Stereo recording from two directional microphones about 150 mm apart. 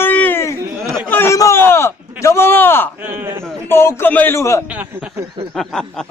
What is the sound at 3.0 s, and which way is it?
Speech, 15° right (ahead or behind).